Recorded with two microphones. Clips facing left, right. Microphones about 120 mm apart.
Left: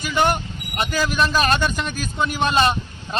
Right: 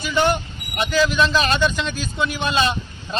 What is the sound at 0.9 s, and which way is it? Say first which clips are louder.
A man's voice: right 4 dB; 45° left (ahead or behind).